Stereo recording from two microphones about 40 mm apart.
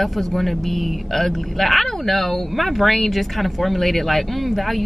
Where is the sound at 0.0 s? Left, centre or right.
Centre.